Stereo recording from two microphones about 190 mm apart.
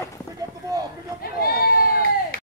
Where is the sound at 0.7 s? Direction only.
20° right (ahead or behind).